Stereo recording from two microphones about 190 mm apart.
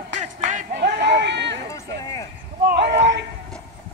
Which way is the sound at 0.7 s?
65° right (ahead or behind).